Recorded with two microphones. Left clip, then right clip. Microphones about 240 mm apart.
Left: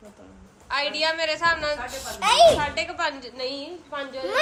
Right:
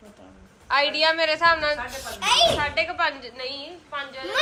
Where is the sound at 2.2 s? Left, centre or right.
Left.